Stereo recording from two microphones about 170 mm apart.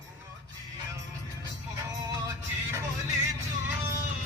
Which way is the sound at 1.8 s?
20° right (ahead or behind).